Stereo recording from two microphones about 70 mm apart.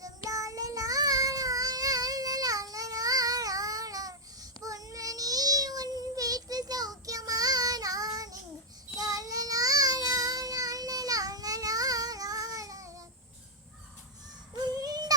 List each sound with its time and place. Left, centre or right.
0.0 s child singing: right
14.6 s child singing: right